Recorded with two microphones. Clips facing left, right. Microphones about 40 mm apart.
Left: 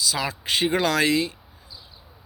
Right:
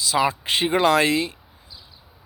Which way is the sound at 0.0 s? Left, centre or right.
Right.